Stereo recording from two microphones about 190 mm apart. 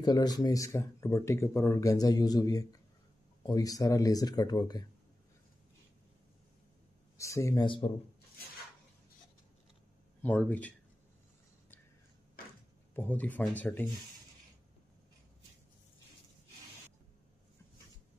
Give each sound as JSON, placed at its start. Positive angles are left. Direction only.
{"t": 0.0, "sound": "speech", "side_deg": 20}
{"t": 7.2, "sound": "speech", "side_deg": 15}
{"t": 10.2, "sound": "speech", "side_deg": 10}
{"t": 12.9, "sound": "speech", "side_deg": 10}